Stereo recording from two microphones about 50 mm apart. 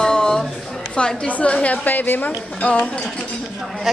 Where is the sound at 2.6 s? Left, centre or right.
Left.